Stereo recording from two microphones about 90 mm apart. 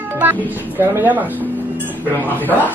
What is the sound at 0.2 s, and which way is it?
Speech, 25° right (ahead or behind).